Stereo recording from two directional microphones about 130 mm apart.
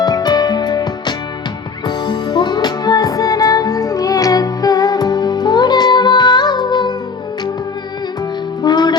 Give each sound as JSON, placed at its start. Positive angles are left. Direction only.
{"t": 0.0, "sound": "music", "side_deg": 30}
{"t": 8.6, "sound": "music", "side_deg": 35}